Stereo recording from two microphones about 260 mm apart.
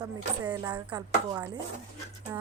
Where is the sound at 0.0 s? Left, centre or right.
Centre.